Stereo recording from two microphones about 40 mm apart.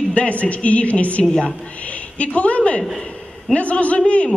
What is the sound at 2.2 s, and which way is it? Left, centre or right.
A man's voice, left.